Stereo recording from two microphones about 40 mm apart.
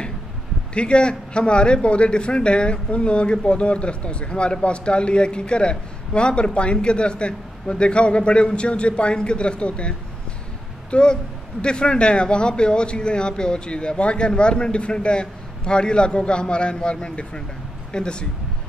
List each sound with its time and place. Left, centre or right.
0.7 s a man's voice: left